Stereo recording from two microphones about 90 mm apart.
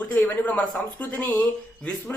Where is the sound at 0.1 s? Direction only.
15° left (ahead or behind).